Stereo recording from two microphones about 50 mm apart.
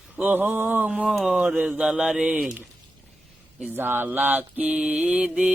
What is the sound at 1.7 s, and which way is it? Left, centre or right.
Mantra, centre.